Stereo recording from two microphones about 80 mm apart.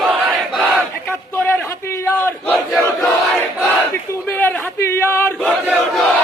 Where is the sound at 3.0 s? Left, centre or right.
Left.